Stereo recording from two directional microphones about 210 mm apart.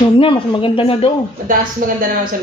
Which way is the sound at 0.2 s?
25° left (ahead or behind).